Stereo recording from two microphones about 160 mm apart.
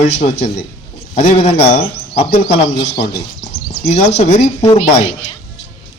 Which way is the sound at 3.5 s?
45° left (ahead or behind).